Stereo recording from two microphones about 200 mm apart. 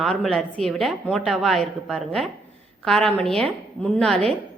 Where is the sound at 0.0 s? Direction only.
5° left (ahead or behind).